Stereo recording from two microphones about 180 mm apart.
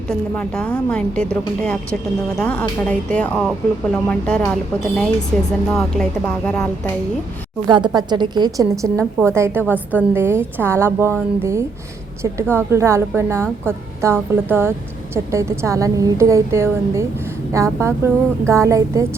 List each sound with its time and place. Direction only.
0.1 s a woman's voice: 5° left (ahead or behind)
7.7 s a woman's voice: 25° right (ahead or behind)
12.2 s a woman's voice: 15° right (ahead or behind)